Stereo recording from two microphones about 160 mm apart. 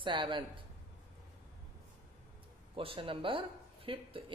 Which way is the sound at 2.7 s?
35° right (ahead or behind).